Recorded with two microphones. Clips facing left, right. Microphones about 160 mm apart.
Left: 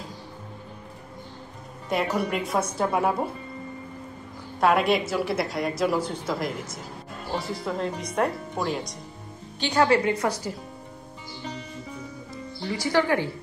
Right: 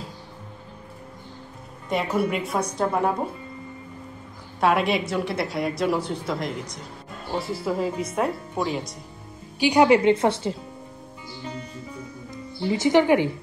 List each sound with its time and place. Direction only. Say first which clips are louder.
1.9 s a woman's voice: right 2 dB; centre (ahead or behind)
4.6 s a woman's voice: even; centre (ahead or behind)
9.6 s a woman's voice: right 4 dB; 15° right (ahead or behind)
12.6 s a woman's voice: right 5 dB; 20° right (ahead or behind)